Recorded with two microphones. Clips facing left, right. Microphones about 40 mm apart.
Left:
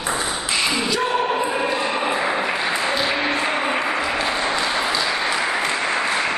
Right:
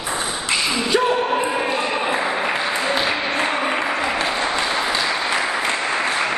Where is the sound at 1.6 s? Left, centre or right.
Centre.